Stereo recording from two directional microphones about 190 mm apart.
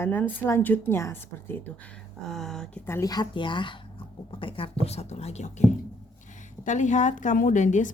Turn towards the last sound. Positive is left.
turn(degrees=40)  # may be behind; listen again after turning